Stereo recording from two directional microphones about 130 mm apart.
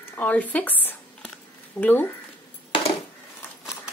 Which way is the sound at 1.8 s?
10° left (ahead or behind).